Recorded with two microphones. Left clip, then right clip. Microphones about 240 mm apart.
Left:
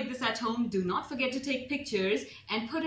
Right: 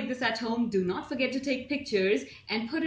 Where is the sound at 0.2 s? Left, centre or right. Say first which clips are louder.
Right 1 dB; centre.